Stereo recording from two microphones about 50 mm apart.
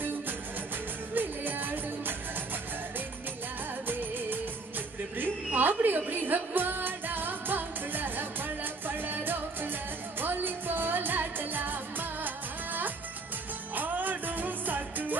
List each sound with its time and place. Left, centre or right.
1.1 s music: right
3.8 s music: right
10.2 s music of asia: right
13.7 s music: right